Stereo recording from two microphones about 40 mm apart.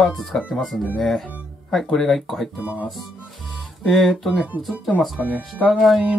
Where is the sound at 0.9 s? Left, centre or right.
Centre.